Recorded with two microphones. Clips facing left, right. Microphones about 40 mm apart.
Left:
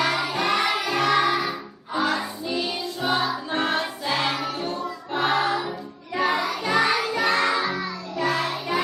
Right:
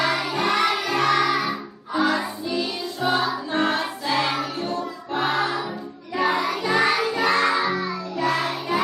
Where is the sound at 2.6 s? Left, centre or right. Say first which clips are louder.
Right 1 dB; centre.